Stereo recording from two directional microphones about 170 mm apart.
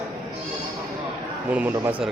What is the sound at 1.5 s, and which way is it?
Speech, 10° right (ahead or behind).